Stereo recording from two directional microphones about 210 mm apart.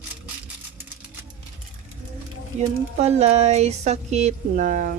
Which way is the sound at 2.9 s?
30° right (ahead or behind).